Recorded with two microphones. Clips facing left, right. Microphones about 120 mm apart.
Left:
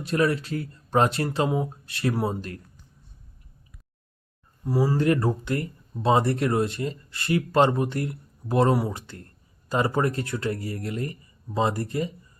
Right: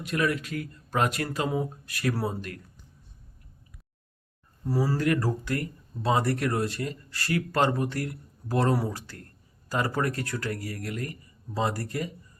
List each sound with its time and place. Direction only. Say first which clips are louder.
0.0 s speech: left 4 dB; 30° left (ahead or behind)
4.6 s speech: left 3 dB; 15° left (ahead or behind)
4.9 s speech: left 4 dB; 25° left (ahead or behind)